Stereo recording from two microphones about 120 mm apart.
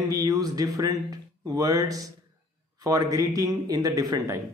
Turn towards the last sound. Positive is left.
turn(degrees=-30)  # may be behind; listen again after turning